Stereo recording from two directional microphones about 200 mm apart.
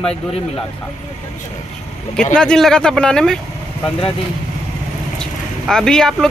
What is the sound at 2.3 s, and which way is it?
Speech, 5° left (ahead or behind).